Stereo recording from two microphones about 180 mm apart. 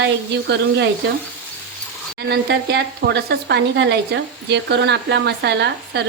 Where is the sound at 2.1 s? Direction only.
65° right (ahead or behind).